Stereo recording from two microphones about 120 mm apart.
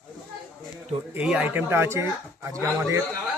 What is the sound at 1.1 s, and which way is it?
A man's voice, 10° right (ahead or behind).